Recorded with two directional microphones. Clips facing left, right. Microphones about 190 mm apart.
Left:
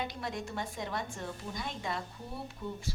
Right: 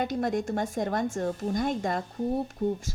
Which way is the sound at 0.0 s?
50° right (ahead or behind).